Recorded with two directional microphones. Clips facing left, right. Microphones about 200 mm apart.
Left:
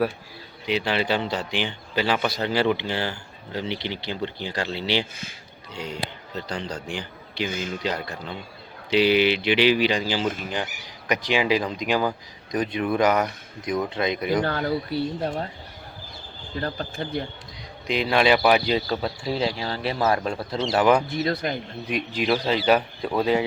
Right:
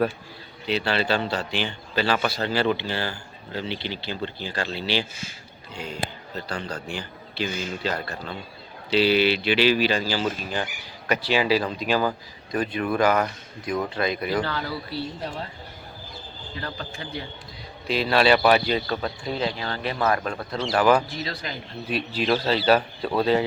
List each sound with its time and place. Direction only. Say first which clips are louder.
0.6 s a man's voice: even; 15° left (ahead or behind)
14.4 s speech: left 5 dB; 50° left (ahead or behind)
16.6 s speech: left 6 dB; 45° left (ahead or behind)
17.8 s speech: even; 15° left (ahead or behind)
20.1 s speech: left 1 dB; 25° left (ahead or behind)
21.1 s speech: left 7 dB; 55° left (ahead or behind)
21.8 s speech: even; 15° left (ahead or behind)